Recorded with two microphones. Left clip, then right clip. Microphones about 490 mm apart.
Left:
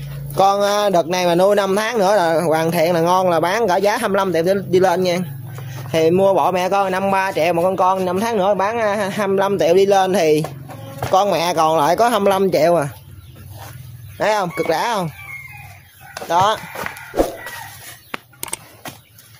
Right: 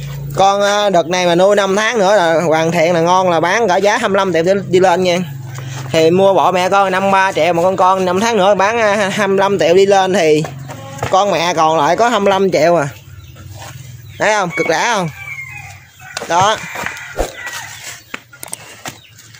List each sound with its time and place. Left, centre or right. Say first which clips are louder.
0.4 s speech: right 3 dB; left
14.1 s speech: right 4 dB; left
16.3 s speech: right 3 dB; left